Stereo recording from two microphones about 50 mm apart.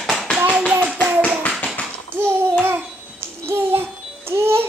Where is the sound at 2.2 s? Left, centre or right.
Right.